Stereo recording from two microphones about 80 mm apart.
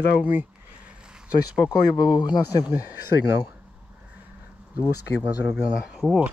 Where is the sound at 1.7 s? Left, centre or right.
Left.